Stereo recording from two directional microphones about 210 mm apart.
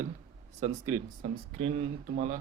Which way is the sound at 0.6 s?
35° right (ahead or behind).